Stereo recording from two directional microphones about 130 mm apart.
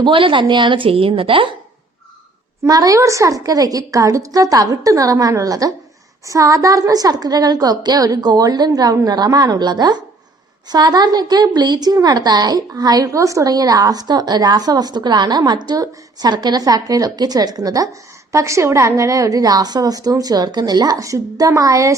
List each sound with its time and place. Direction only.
0.0 s a woman's voice: 40° right (ahead or behind)
2.6 s a woman's voice: 25° right (ahead or behind)